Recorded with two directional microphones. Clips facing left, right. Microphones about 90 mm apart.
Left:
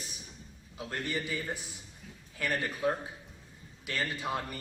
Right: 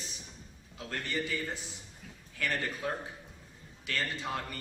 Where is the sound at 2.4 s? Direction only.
15° left (ahead or behind).